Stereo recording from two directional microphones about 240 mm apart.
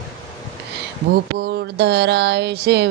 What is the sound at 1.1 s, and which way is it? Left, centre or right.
Mantra, right.